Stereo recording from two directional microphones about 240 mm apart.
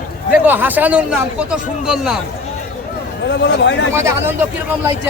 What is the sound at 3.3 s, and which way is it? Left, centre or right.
Speech, left.